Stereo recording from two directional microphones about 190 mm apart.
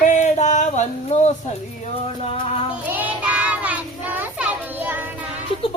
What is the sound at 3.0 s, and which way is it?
Child singing, 10° right (ahead or behind).